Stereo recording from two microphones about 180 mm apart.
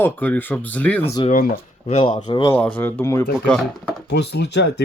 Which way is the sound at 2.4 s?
10° left (ahead or behind).